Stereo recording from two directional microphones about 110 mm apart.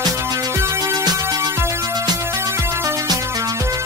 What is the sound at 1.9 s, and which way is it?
Music, 40° right (ahead or behind).